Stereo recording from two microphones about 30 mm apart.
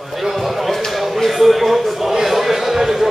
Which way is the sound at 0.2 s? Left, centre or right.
Centre.